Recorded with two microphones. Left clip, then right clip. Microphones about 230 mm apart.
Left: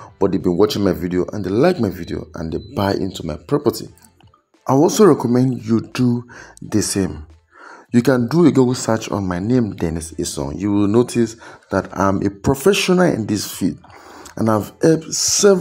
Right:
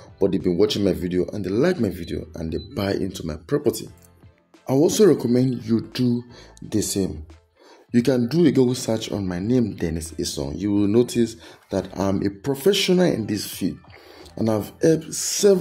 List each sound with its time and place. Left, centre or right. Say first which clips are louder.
0.4 s speech: left 5 dB; centre
4.8 s speech: left 3 dB; centre
5.7 s speech: left 4 dB; centre
5.9 s speech: left 4 dB; centre
7.9 s speech: left 5 dB; centre